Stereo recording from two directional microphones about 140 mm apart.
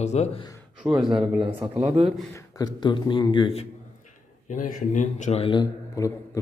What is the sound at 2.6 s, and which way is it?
Speech, 35° left (ahead or behind).